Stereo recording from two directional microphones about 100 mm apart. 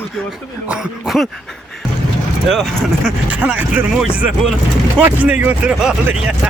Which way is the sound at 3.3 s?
15° right (ahead or behind).